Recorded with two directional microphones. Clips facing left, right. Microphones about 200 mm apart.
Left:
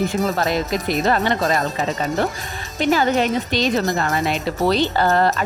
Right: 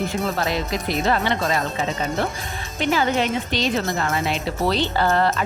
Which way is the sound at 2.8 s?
40° left (ahead or behind).